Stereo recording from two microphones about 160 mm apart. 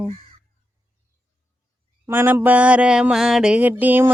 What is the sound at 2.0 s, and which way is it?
Mantra, 15° right (ahead or behind).